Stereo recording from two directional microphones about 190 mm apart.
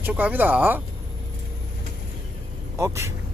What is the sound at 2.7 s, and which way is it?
Speech, 15° right (ahead or behind).